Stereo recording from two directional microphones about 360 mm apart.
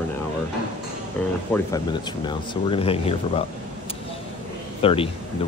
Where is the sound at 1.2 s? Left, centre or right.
Centre.